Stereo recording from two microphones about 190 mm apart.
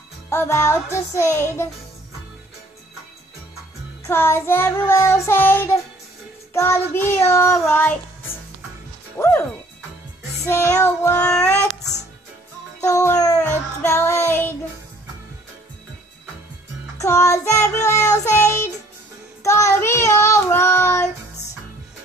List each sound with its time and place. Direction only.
0.3 s child singing: 15° left (ahead or behind)
4.0 s child singing: 10° left (ahead or behind)
9.1 s speech: 10° left (ahead or behind)
10.4 s child singing: 15° left (ahead or behind)
12.8 s child singing: 15° left (ahead or behind)
17.0 s child singing: 15° left (ahead or behind)